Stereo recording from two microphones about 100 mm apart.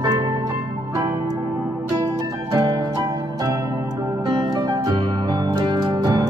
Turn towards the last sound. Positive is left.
turn(degrees=-40)  # may be behind; listen again after turning